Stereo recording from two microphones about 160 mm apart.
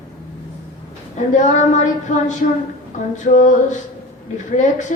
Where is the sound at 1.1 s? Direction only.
50° left (ahead or behind).